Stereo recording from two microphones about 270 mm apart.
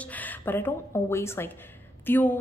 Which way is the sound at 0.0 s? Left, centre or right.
Centre.